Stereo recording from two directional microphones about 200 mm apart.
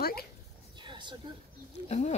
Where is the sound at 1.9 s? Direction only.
35° left (ahead or behind).